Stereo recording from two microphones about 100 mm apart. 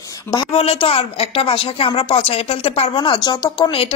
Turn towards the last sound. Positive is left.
turn(degrees=50)  # may be behind; listen again after turning